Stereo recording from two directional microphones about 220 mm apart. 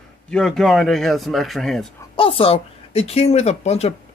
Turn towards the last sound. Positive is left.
turn(degrees=30)  # may be behind; listen again after turning